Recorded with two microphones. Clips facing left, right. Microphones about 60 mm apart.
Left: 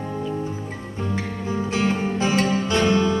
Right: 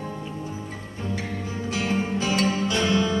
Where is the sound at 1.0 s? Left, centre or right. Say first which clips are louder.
Left 3 dB; left.